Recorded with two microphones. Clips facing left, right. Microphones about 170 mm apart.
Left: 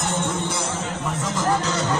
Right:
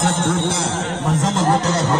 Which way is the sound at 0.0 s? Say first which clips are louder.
Right 6 dB; 90° right.